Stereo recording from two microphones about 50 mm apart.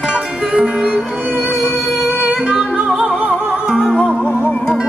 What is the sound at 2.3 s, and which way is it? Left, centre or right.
Music, centre.